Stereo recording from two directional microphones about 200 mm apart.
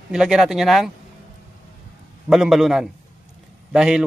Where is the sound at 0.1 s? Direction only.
5° right (ahead or behind).